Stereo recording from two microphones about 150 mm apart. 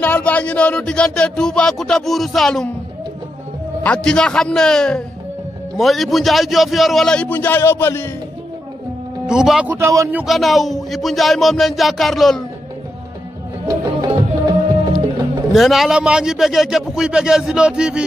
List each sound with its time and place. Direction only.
0.0 s speech: 10° left (ahead or behind)
3.8 s speech: 5° left (ahead or behind)
9.3 s a man's voice: 5° right (ahead or behind)
10.2 s speech: centre (ahead or behind)
13.7 s music: 25° right (ahead or behind)
15.5 s speech: centre (ahead or behind)